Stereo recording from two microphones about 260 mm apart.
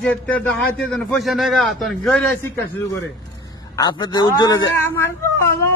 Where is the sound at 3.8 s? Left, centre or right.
Centre.